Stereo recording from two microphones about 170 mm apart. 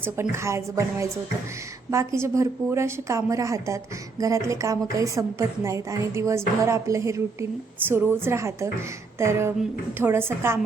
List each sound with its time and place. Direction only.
0.0 s a woman's voice: 15° right (ahead or behind)